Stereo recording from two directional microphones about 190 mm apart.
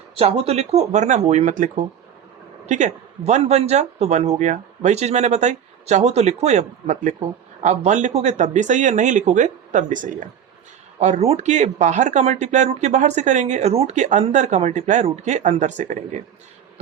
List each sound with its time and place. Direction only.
0.2 s speech: 30° right (ahead or behind)